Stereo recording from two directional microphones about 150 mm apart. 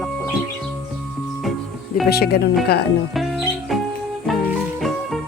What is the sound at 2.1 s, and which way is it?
Speech, 90° left.